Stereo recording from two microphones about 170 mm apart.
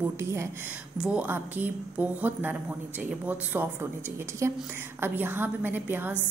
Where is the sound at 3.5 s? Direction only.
15° right (ahead or behind).